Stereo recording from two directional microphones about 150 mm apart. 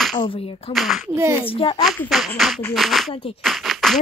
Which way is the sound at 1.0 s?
15° right (ahead or behind).